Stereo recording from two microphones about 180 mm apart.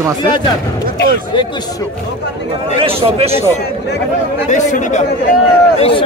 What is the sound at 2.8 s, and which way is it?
Speech, 30° right (ahead or behind).